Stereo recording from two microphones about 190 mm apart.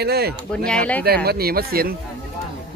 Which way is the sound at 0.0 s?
55° right (ahead or behind).